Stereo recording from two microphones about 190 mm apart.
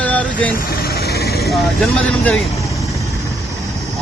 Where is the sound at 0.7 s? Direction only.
55° left (ahead or behind).